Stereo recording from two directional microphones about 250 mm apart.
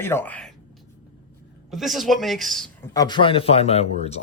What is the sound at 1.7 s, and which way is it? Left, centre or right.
Speech, centre.